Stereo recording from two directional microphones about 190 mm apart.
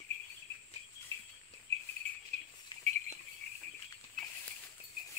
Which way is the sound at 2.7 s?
25° left (ahead or behind).